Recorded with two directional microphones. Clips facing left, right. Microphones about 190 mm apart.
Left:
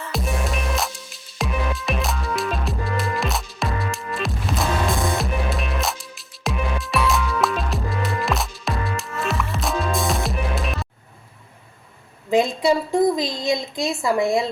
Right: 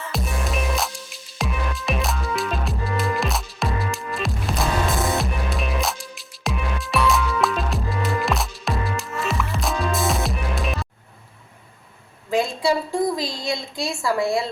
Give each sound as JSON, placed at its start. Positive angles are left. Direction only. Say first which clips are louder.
{"t": 0.1, "sound": "music", "louder": "left 2 dB", "side_deg": 0}
{"t": 12.3, "sound": "a woman's voice", "louder": "left 3 dB", "side_deg": 20}